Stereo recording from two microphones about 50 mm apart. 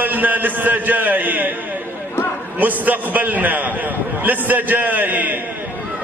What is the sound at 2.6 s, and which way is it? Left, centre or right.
A man's voice, right.